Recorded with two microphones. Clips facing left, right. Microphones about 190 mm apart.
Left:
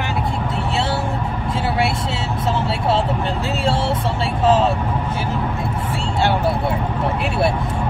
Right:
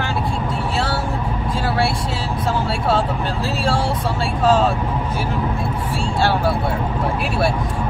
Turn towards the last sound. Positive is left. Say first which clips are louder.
# even
turn(degrees=20)  # may be behind; listen again after turning